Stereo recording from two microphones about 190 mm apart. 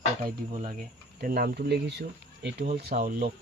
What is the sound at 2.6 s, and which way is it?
Speech, 50° right (ahead or behind).